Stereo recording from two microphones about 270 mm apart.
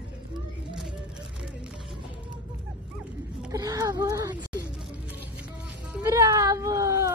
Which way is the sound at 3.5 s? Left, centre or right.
Centre.